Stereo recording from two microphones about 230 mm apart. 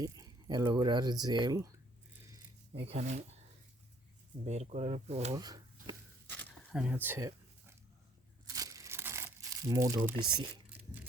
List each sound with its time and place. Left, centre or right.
0.0 s speech: centre
2.8 s speech: right
4.4 s speech: right
5.3 s a sound: centre
6.2 s zipper: centre
8.5 s crumpling: centre